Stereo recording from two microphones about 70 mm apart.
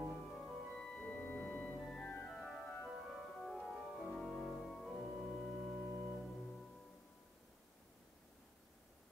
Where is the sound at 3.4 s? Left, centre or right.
Centre.